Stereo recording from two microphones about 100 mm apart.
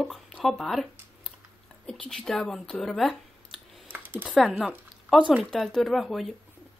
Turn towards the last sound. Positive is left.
turn(degrees=0)  # may be behind; listen again after turning